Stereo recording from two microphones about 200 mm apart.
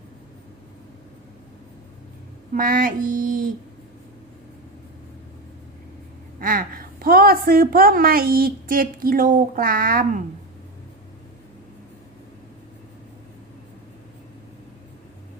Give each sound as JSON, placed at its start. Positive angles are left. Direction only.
{"t": 2.5, "sound": "a woman's voice", "side_deg": -45}
{"t": 6.4, "sound": "a woman's voice", "side_deg": -45}